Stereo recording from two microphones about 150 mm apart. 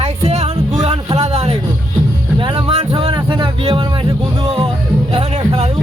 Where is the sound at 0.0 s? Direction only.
45° right (ahead or behind).